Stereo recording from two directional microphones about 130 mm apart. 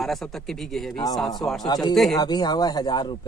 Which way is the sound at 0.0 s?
Centre (ahead or behind).